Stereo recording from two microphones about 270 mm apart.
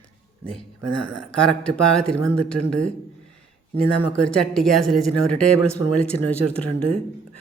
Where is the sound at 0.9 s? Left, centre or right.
Right.